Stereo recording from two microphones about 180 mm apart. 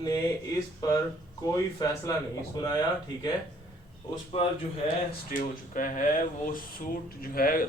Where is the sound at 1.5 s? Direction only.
20° left (ahead or behind).